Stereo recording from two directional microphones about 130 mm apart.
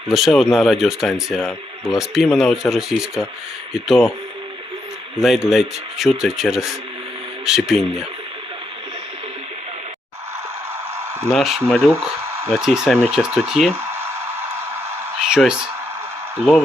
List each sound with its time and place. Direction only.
0.1 s speech: centre (ahead or behind)
5.2 s speech: 5° right (ahead or behind)
11.3 s speech: centre (ahead or behind)
12.3 s a sound: 20° right (ahead or behind)
12.5 s speech: 5° right (ahead or behind)
15.2 s speech: 5° right (ahead or behind)